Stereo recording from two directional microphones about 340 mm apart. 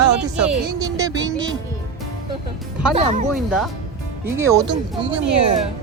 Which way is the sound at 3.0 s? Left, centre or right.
Right.